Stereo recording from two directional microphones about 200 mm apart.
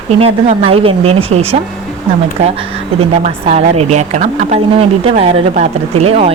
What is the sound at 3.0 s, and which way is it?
Speech, 35° right (ahead or behind).